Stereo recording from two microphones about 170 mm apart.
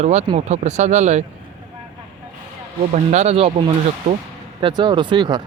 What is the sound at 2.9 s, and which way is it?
Speech, 40° right (ahead or behind).